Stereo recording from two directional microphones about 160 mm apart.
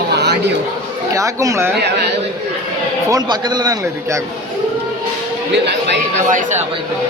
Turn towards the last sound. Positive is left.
turn(degrees=-50)  # may be behind; listen again after turning